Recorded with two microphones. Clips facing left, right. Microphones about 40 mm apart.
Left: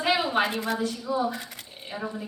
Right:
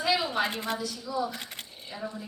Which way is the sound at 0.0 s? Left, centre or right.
Left.